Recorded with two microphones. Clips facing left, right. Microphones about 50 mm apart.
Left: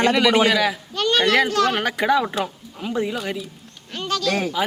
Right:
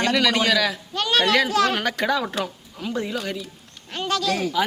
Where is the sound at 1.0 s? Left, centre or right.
Centre.